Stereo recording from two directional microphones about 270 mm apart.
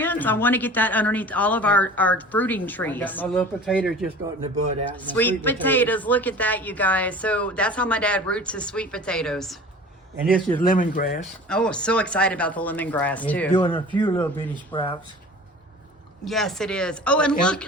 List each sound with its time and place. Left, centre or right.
0.0 s speech: centre
4.4 s speech: right
4.9 s speech: centre
10.8 s speech: left
11.4 s speech: centre
13.5 s speech: centre
16.2 s speech: centre